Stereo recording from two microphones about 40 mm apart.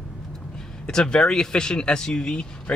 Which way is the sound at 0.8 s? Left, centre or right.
Left.